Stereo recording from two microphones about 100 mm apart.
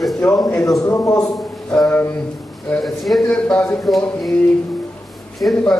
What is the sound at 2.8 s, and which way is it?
A man's voice, centre (ahead or behind).